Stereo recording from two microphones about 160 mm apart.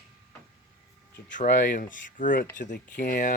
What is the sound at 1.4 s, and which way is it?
Speech, 60° left (ahead or behind).